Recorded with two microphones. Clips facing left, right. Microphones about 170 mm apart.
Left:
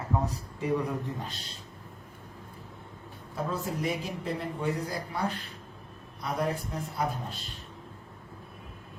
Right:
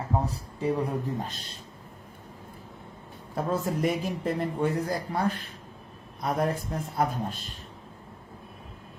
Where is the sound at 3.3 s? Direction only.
50° right (ahead or behind).